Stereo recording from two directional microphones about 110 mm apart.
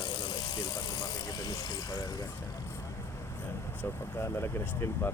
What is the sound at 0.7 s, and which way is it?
Vehicle, 40° left (ahead or behind).